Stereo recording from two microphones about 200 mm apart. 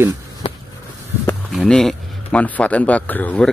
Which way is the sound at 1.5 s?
Centre (ahead or behind).